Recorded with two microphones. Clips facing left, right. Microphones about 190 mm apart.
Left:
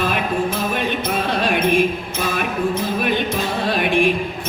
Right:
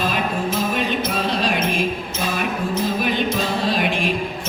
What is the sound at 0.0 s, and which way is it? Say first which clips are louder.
Music: left 2 dB; 60° left (ahead or behind).